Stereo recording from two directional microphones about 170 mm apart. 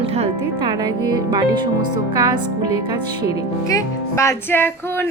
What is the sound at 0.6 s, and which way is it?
Speech, 25° right (ahead or behind).